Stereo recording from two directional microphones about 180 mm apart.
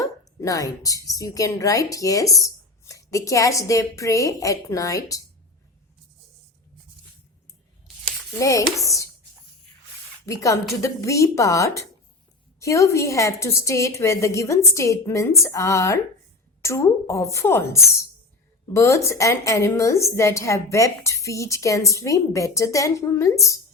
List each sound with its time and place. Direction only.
0.0 s a woman's voice: 20° left (ahead or behind)
8.4 s speech: 20° left (ahead or behind)
10.2 s a woman's voice: 15° left (ahead or behind)